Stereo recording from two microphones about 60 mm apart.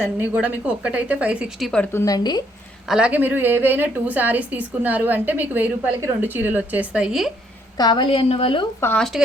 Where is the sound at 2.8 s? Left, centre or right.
Centre.